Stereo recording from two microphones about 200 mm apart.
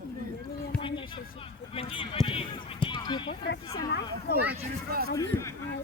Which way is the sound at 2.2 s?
30° left (ahead or behind).